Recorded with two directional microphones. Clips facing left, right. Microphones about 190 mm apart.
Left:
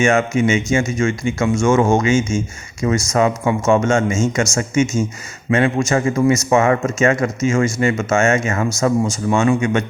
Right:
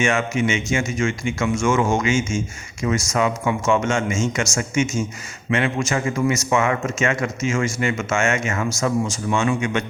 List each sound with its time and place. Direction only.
0.0 s a man's voice: 40° left (ahead or behind)